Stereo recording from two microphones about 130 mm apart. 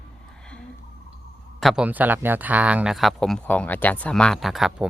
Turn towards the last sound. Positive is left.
turn(degrees=0)  # may be behind; listen again after turning